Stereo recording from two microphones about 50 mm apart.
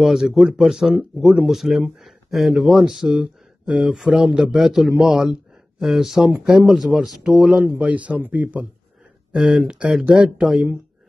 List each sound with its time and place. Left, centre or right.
0.0 s a man's voice: centre
3.6 s speech: right
3.9 s a man's voice: centre
7.8 s speech: right
9.4 s a man's voice: centre
10.4 s a man's voice: centre